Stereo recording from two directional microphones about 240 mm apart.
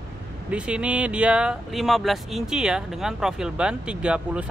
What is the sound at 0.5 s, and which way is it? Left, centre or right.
Speech, centre.